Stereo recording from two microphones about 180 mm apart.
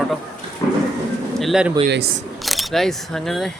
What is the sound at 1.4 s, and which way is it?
Speech, 5° right (ahead or behind).